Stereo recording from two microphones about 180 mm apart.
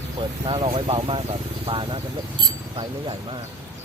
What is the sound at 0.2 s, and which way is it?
Speech, 30° right (ahead or behind).